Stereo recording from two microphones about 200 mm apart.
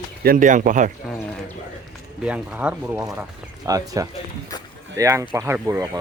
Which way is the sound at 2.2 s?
5° right (ahead or behind).